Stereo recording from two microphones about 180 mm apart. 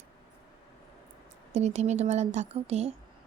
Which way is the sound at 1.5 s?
40° right (ahead or behind).